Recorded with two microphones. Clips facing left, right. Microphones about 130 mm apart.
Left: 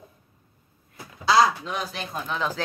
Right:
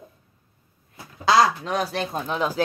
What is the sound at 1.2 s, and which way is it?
Speech, 45° right (ahead or behind).